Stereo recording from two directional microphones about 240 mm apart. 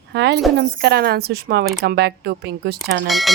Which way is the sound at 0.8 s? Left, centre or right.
Right.